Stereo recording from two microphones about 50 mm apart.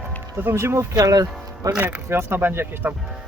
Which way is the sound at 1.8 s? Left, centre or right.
Right.